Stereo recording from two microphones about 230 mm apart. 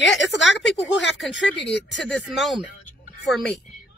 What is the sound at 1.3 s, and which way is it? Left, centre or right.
Speech, left.